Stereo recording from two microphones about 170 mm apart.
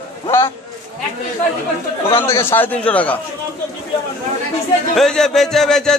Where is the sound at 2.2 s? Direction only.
15° left (ahead or behind).